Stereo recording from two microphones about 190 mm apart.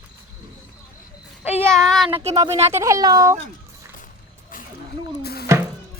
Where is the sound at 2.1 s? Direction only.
35° right (ahead or behind).